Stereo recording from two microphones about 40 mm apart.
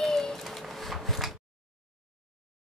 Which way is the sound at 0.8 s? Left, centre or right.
Centre.